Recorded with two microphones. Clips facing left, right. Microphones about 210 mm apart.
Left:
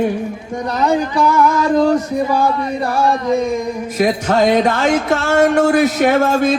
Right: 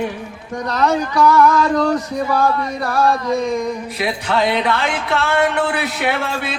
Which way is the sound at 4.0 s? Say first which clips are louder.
Left 6 dB; 45° left (ahead or behind).